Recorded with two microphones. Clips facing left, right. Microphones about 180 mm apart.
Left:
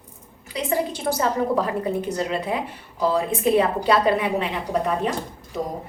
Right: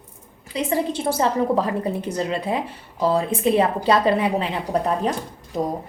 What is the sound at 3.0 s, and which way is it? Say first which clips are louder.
Speech: right 1 dB; 30° right (ahead or behind).